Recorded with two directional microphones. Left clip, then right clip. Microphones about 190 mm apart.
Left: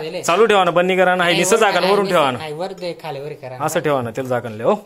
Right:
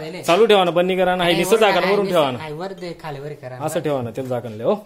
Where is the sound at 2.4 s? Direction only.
40° right (ahead or behind).